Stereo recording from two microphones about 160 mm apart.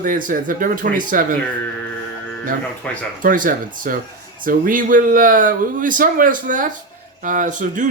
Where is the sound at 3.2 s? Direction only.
60° right (ahead or behind).